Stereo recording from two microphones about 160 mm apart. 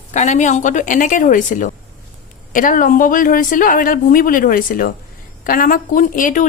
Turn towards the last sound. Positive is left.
turn(degrees=55)  # may be behind; listen again after turning